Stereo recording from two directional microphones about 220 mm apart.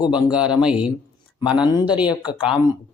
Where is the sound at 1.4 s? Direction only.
20° left (ahead or behind).